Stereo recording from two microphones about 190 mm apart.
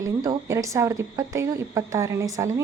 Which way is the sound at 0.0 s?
15° right (ahead or behind).